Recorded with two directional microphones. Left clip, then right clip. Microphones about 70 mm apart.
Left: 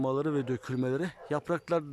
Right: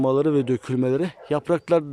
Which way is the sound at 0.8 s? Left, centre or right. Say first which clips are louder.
Right 8 dB; right.